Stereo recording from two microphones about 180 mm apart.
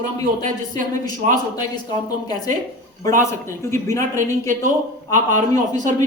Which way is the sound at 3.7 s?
15° left (ahead or behind).